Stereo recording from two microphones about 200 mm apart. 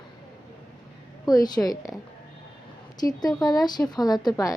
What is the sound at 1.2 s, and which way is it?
Speech, 20° left (ahead or behind).